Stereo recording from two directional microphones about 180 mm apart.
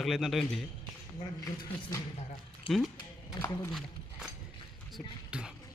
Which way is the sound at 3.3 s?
20° left (ahead or behind).